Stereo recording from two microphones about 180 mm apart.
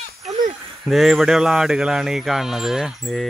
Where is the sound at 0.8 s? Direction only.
Centre (ahead or behind).